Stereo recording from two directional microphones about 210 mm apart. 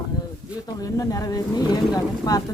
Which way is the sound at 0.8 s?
15° left (ahead or behind).